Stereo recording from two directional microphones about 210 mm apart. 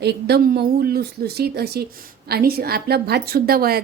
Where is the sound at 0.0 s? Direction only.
50° right (ahead or behind).